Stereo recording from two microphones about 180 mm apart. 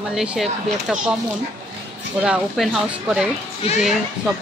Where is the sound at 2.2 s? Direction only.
5° right (ahead or behind).